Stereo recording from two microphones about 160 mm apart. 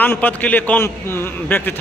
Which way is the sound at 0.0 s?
10° left (ahead or behind).